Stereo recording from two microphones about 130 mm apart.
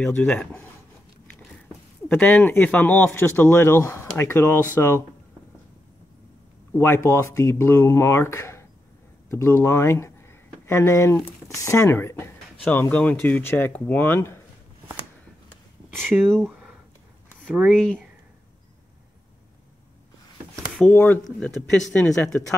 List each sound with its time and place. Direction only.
0.0 s speech: 10° left (ahead or behind)
2.0 s speech: 10° left (ahead or behind)
6.8 s speech: 20° left (ahead or behind)
15.9 s speech: 15° right (ahead or behind)
17.6 s speech: 5° left (ahead or behind)
20.8 s speech: 15° left (ahead or behind)